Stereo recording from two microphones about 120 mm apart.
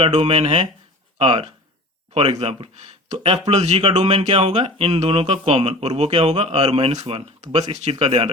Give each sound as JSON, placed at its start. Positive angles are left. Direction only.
{"t": 0.1, "sound": "speech", "side_deg": -55}
{"t": 2.4, "sound": "speech", "side_deg": -60}
{"t": 3.8, "sound": "speech", "side_deg": -50}